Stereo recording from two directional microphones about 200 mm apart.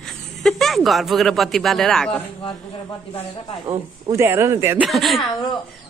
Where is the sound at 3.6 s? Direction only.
15° right (ahead or behind).